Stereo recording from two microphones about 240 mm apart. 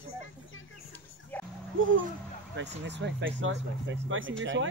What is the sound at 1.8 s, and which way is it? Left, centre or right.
Speech, right.